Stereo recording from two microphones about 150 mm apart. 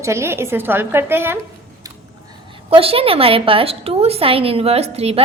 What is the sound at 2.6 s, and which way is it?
A woman's voice, 40° right (ahead or behind).